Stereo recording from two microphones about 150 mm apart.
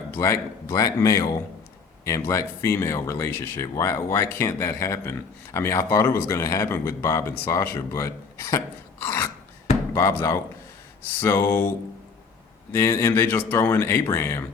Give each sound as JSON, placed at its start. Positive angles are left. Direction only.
{"t": 0.1, "sound": "speech", "side_deg": 20}
{"t": 12.7, "sound": "speech", "side_deg": 15}